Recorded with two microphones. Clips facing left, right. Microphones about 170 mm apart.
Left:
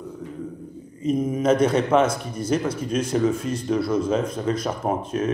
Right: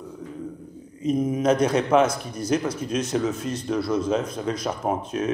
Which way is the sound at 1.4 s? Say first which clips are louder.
Left 2 dB; 5° left (ahead or behind).